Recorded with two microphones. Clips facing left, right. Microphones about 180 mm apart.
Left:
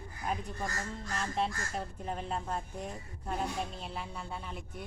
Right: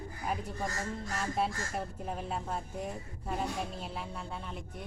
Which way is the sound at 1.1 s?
5° right (ahead or behind).